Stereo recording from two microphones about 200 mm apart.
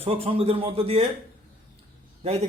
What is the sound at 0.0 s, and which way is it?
Speech, 30° right (ahead or behind).